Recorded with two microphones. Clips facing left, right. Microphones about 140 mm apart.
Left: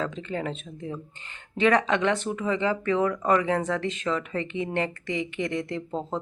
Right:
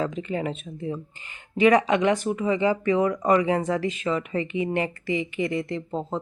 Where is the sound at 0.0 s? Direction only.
10° right (ahead or behind).